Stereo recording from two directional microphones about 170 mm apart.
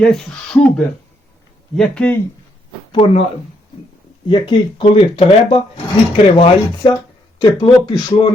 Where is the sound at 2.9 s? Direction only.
35° left (ahead or behind).